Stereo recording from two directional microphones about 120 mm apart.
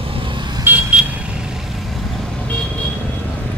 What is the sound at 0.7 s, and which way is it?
Vehicle, 15° right (ahead or behind).